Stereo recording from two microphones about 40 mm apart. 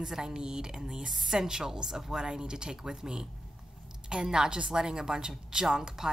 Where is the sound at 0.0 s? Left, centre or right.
Centre.